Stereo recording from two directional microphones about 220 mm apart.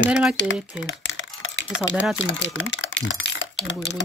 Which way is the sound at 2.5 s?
60° left (ahead or behind).